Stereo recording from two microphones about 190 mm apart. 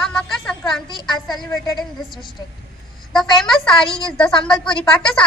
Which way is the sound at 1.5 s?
15° left (ahead or behind).